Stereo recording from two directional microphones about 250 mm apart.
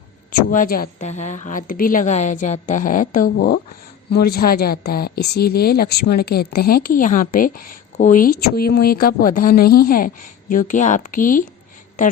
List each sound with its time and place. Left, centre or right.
0.3 s a woman's voice: left